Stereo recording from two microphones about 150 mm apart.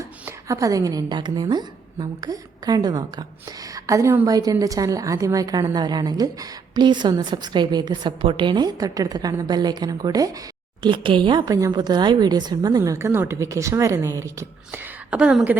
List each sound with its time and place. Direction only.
0.3 s a woman's voice: 20° right (ahead or behind)
15.1 s a woman's voice: 10° right (ahead or behind)